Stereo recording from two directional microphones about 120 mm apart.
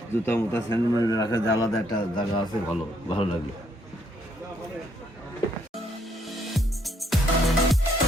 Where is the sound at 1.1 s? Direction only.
30° left (ahead or behind).